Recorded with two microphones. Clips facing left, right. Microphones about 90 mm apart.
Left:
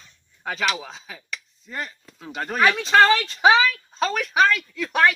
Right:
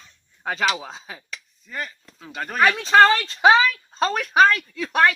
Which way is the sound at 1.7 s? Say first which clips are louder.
Even; 5° left (ahead or behind).